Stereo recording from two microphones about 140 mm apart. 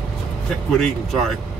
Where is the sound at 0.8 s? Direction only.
Centre (ahead or behind).